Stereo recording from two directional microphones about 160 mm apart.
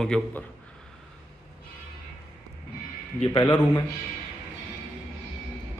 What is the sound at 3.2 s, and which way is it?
Speech, 25° left (ahead or behind).